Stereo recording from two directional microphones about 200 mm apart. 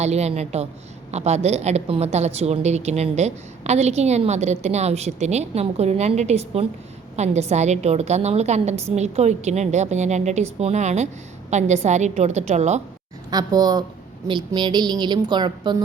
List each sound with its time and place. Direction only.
0.0 s a woman's voice: 35° right (ahead or behind)
13.3 s a woman's voice: 20° right (ahead or behind)